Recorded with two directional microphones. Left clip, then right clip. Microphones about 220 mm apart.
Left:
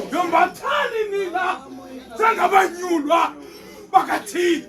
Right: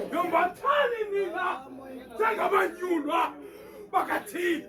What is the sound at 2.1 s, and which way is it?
Speech, 10° left (ahead or behind).